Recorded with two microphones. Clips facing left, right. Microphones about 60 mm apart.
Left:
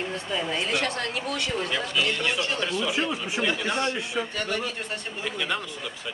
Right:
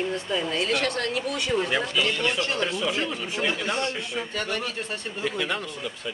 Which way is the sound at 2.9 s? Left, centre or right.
Centre.